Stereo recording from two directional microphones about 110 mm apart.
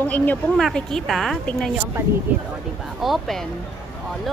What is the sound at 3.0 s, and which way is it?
Speech, centre (ahead or behind).